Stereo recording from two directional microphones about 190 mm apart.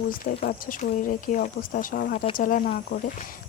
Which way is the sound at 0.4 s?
45° left (ahead or behind).